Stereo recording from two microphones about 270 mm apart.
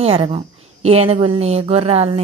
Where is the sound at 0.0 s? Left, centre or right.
Right.